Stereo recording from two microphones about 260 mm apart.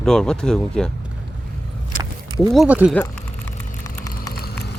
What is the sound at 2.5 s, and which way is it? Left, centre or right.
Speech, centre.